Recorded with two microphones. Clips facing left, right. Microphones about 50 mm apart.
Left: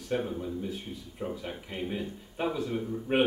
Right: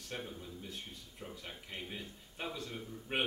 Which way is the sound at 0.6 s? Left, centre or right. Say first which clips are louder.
Left 11 dB; centre.